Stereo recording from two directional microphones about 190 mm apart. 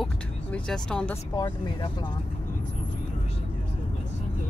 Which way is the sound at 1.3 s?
20° left (ahead or behind).